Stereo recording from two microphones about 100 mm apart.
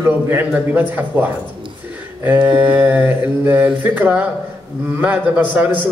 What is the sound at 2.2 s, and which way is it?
Mantra, 15° right (ahead or behind).